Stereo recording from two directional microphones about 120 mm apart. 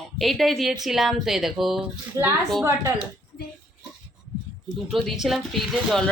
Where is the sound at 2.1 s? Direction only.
30° right (ahead or behind).